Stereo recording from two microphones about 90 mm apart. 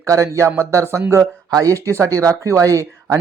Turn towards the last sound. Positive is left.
turn(degrees=-35)  # may be behind; listen again after turning